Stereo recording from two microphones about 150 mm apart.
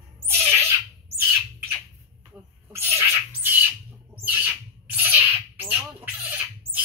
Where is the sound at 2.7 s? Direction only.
15° right (ahead or behind).